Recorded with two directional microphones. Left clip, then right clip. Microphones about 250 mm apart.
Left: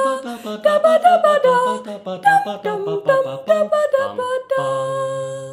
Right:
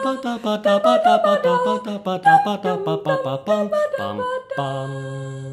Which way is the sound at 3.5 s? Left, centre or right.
Left.